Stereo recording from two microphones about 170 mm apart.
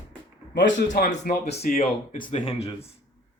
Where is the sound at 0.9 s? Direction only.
65° left (ahead or behind).